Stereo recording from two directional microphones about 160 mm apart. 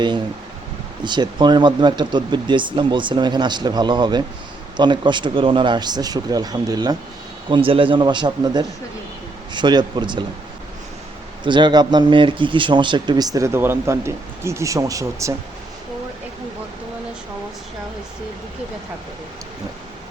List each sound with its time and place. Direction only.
1.0 s speech: 30° right (ahead or behind)
11.4 s speech: 30° right (ahead or behind)